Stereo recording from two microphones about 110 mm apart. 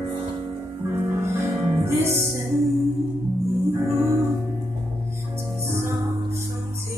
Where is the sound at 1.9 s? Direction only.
25° right (ahead or behind).